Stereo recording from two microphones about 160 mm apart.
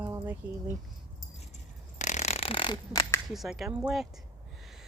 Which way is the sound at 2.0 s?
50° left (ahead or behind).